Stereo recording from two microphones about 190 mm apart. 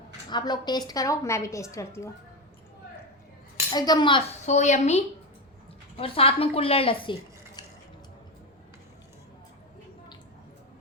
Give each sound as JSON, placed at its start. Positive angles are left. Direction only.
{"t": 0.3, "sound": "a woman's voice", "side_deg": 20}
{"t": 3.7, "sound": "speech", "side_deg": 20}
{"t": 4.4, "sound": "speech", "side_deg": 40}